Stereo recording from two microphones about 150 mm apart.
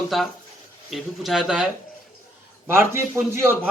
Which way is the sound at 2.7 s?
15° right (ahead or behind).